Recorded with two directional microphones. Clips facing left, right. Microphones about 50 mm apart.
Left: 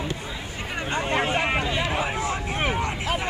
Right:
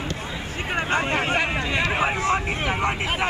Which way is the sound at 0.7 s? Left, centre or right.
Right.